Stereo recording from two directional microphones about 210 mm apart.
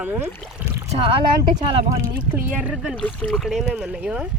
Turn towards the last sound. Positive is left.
turn(degrees=-5)  # may be behind; listen again after turning